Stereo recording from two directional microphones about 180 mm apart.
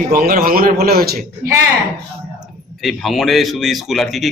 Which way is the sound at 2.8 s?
Centre (ahead or behind).